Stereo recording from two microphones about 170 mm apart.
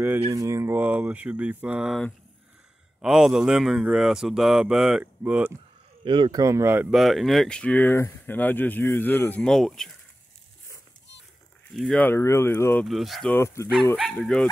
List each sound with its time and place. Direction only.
0.3 s speech: 20° right (ahead or behind)
6.0 s speech: 30° right (ahead or behind); by 7.0 s 10° right (ahead or behind)
7.0 s speech: centre (ahead or behind)
11.7 s speech: centre (ahead or behind)
12.8 s speech: centre (ahead or behind)
13.3 s speech: 15° left (ahead or behind)
13.9 s speech: centre (ahead or behind)